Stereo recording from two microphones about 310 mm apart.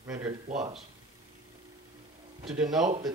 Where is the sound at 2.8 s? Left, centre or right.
Right.